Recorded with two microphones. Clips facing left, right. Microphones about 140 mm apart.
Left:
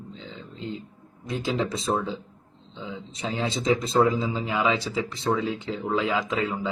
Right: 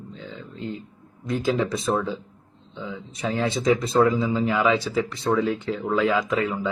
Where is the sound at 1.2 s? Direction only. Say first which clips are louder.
Right 4 dB; 25° left (ahead or behind).